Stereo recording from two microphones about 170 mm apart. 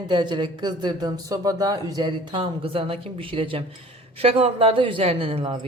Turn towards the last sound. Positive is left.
turn(degrees=-35)  # may be behind; listen again after turning